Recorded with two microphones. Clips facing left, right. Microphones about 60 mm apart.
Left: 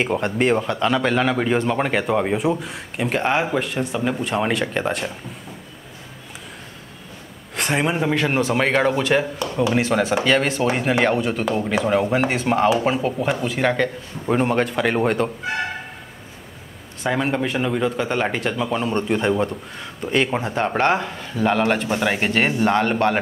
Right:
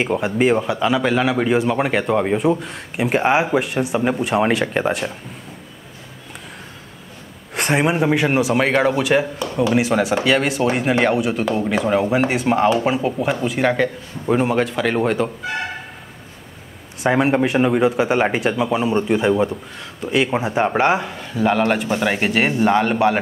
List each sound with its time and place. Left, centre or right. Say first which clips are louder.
0.0 s speech: right 2 dB; centre
3.1 s speech: right 4 dB; centre
7.5 s speech: right 3 dB; centre
17.0 s speech: right 5 dB; centre